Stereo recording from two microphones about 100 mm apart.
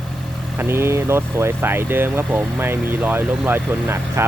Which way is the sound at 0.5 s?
25° right (ahead or behind).